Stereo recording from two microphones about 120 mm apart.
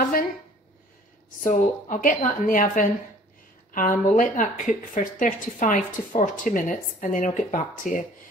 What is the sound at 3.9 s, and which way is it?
A woman's voice, 90° left.